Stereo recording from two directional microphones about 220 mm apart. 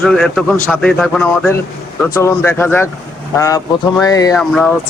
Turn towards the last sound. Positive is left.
turn(degrees=0)  # may be behind; listen again after turning